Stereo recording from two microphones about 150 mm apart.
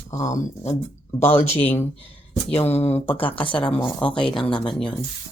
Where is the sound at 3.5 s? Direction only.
10° left (ahead or behind).